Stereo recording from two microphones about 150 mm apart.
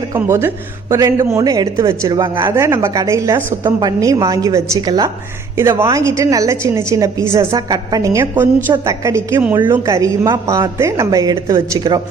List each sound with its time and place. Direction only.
0.2 s speech: 15° right (ahead or behind)